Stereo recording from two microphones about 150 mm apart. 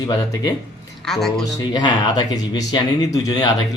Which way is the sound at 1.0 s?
Centre (ahead or behind).